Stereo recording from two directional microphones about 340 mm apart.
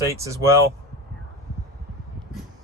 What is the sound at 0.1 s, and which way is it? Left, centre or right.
Speech, centre.